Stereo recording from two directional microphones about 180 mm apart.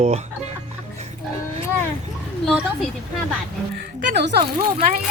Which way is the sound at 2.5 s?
Centre (ahead or behind).